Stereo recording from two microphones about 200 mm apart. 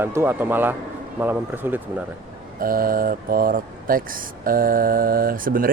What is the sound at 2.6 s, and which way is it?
Speech, 45° right (ahead or behind).